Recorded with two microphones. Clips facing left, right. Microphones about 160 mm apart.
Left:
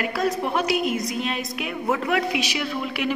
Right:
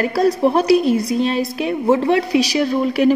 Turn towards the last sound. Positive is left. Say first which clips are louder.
# right 11 dB
turn(degrees=-40)  # may be behind; listen again after turning